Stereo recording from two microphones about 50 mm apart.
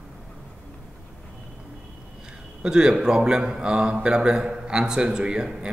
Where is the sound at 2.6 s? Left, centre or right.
Centre.